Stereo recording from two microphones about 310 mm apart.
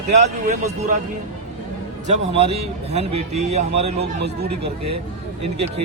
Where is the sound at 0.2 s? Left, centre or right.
Right.